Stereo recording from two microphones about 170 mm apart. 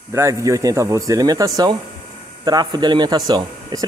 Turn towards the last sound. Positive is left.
turn(degrees=-25)  # may be behind; listen again after turning